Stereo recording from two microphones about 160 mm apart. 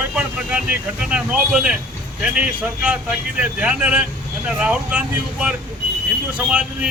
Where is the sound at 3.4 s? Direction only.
10° right (ahead or behind).